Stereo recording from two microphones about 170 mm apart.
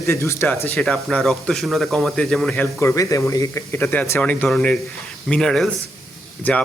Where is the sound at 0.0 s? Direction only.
15° left (ahead or behind).